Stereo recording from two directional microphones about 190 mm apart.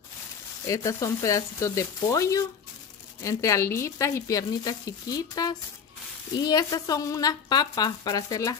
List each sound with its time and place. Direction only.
0.7 s a woman's voice: 15° left (ahead or behind)